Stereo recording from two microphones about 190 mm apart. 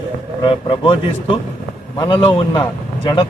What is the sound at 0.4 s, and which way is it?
Speech, 25° left (ahead or behind).